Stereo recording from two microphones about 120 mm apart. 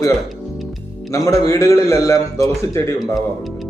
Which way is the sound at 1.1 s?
25° left (ahead or behind).